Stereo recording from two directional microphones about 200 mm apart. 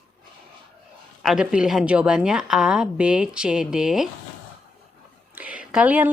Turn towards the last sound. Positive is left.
turn(degrees=-10)  # may be behind; listen again after turning